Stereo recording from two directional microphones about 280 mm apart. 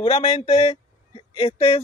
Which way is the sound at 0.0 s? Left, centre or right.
Left.